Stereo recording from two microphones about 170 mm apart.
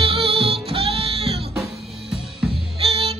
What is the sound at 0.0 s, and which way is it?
Music, 35° right (ahead or behind).